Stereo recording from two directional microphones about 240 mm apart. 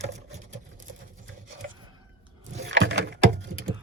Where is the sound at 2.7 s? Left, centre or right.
Right.